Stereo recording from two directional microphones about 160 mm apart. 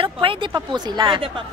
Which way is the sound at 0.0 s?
35° right (ahead or behind).